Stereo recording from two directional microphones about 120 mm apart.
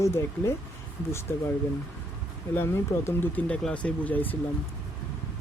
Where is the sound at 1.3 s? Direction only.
20° left (ahead or behind).